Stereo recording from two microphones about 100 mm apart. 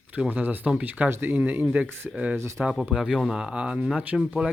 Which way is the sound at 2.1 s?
10° right (ahead or behind).